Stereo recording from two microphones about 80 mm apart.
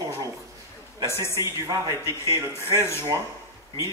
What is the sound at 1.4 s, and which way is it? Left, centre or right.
Speech, right.